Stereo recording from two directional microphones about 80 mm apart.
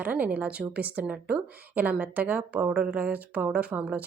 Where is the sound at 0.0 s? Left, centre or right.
Centre.